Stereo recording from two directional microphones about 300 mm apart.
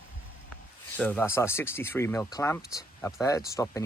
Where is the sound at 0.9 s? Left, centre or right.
Centre.